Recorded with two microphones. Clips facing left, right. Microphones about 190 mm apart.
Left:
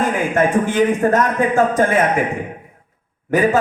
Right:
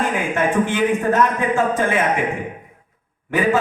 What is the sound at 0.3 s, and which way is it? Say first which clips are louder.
Speech: left 4 dB; 40° left (ahead or behind).